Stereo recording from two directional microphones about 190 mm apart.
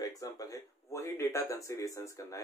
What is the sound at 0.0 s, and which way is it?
Speech, 15° left (ahead or behind).